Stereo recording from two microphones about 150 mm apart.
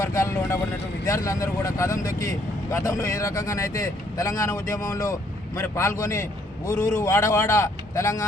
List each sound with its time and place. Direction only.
0.0 s speech: 20° left (ahead or behind)